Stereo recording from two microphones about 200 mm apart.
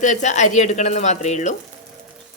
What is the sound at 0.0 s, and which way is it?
A woman's voice, 35° left (ahead or behind).